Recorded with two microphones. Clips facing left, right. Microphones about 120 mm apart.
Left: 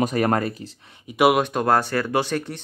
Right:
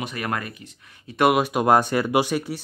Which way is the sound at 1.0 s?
5° left (ahead or behind).